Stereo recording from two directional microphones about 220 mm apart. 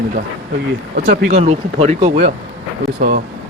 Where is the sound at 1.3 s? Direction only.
30° right (ahead or behind).